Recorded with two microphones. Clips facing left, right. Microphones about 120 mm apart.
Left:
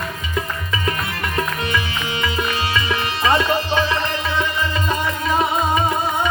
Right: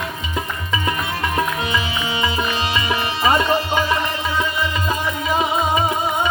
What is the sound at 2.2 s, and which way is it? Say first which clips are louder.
Tabla: even; 10° right (ahead or behind).